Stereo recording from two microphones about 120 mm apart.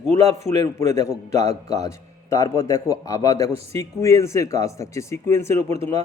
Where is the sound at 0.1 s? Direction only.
60° right (ahead or behind).